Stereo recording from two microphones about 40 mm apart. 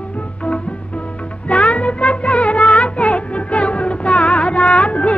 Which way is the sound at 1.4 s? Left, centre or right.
Left.